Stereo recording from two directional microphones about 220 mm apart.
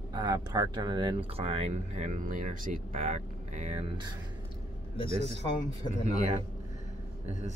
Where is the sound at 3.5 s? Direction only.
25° right (ahead or behind).